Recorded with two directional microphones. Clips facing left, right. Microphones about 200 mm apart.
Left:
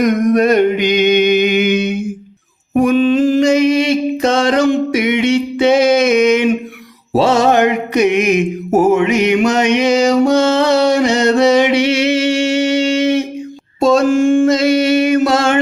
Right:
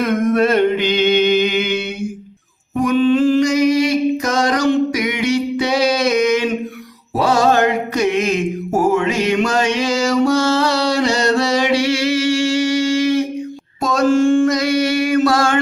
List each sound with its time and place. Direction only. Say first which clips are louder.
0.0 s a sound: left 3 dB; 15° left (ahead or behind)
3.4 s music: left 3 dB; 25° left (ahead or behind)
7.1 s mantra: left 3 dB; 25° left (ahead or behind)
14.1 s music: left 2 dB; 15° left (ahead or behind)